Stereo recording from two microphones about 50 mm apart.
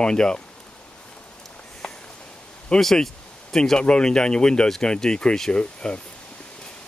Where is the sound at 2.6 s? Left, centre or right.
Centre.